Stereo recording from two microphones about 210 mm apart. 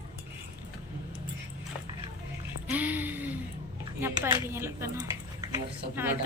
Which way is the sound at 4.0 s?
10° right (ahead or behind).